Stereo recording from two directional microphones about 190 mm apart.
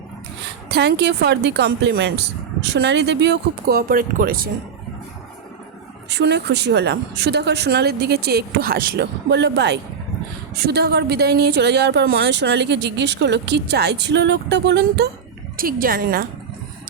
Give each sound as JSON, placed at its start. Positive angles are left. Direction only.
{"t": 0.7, "sound": "a woman's voice", "side_deg": -60}
{"t": 6.1, "sound": "a woman's voice", "side_deg": -65}
{"t": 15.5, "sound": "speech", "side_deg": -50}